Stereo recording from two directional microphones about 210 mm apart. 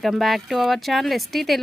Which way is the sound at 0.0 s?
Centre (ahead or behind).